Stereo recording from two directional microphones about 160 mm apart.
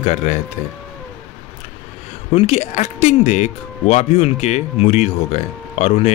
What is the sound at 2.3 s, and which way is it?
Speech, 40° left (ahead or behind).